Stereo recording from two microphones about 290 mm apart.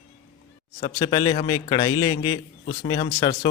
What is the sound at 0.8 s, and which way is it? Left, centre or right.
A man's voice, centre.